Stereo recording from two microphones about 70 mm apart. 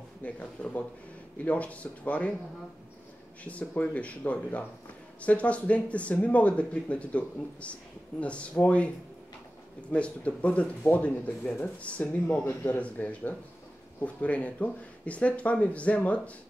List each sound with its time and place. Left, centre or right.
0.2 s speech: centre
3.4 s speech: left
9.9 s speech: centre